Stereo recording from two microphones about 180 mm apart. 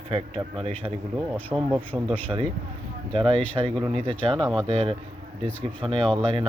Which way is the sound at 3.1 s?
30° right (ahead or behind).